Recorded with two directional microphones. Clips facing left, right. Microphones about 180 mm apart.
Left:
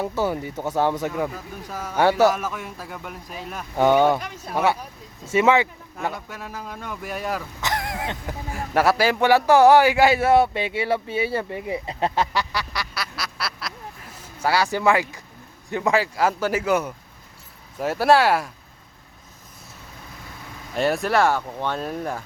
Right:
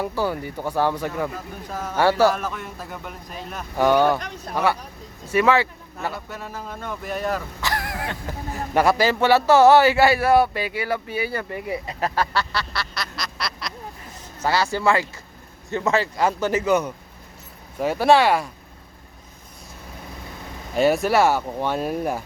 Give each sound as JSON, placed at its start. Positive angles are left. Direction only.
{"t": 0.0, "sound": "a man's voice", "side_deg": 20}
{"t": 2.2, "sound": "a man's voice", "side_deg": 5}
{"t": 5.2, "sound": "speech", "side_deg": 20}
{"t": 6.1, "sound": "a man's voice", "side_deg": 10}
{"t": 7.6, "sound": "speech", "side_deg": 20}
{"t": 8.5, "sound": "a man's voice", "side_deg": 5}
{"t": 20.7, "sound": "speech", "side_deg": 0}